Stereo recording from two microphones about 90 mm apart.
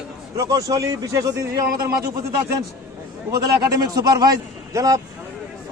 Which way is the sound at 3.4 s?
40° right (ahead or behind).